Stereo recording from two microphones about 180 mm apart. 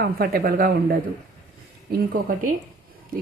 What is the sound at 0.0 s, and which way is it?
A woman's voice, 55° right (ahead or behind).